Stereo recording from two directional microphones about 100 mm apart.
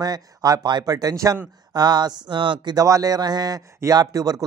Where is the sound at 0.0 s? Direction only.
40° right (ahead or behind).